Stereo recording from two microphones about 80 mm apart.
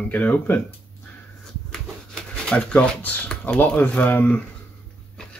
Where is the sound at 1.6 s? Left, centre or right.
Centre.